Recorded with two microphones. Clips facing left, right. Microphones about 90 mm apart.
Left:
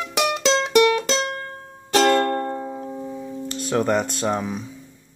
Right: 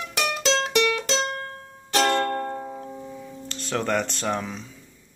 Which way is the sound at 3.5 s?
15° left (ahead or behind).